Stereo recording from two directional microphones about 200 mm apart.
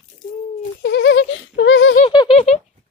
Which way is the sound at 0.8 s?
65° left (ahead or behind).